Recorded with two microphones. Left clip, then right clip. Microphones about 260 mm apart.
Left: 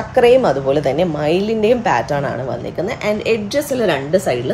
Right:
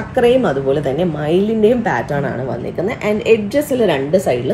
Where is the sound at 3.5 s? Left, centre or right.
Left.